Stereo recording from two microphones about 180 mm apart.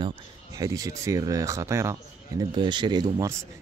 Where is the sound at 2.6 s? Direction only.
25° right (ahead or behind).